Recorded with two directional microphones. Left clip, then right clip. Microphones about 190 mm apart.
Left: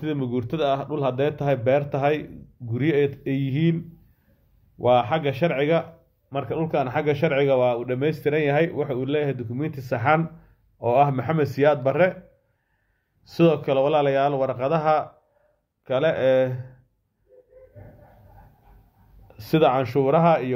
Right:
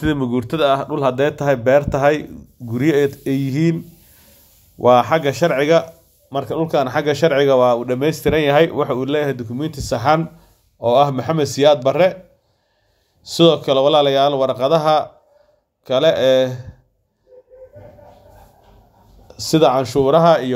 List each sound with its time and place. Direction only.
0.0 s speech: 20° right (ahead or behind)
13.2 s speech: 20° right (ahead or behind)
19.3 s speech: 25° right (ahead or behind)